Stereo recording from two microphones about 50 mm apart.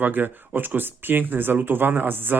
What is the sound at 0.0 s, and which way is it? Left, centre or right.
Speech, right.